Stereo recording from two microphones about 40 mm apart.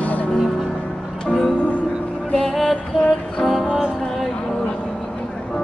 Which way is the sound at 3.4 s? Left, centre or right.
Centre.